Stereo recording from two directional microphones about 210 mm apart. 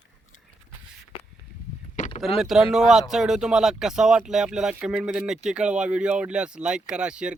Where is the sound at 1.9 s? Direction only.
35° left (ahead or behind).